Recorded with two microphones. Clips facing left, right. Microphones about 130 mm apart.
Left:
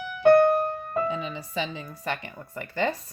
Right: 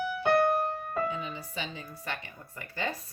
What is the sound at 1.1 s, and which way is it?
Speech, 90° left.